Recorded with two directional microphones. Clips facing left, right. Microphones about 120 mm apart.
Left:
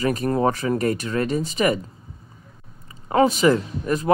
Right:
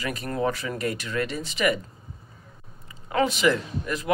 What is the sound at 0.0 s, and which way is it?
Speech, 40° left (ahead or behind).